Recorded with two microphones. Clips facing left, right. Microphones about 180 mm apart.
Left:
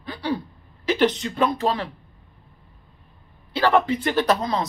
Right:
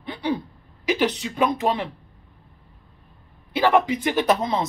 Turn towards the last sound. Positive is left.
turn(degrees=-20)  # may be behind; listen again after turning